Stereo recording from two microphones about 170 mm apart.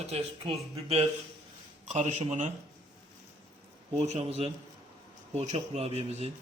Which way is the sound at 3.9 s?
40° right (ahead or behind).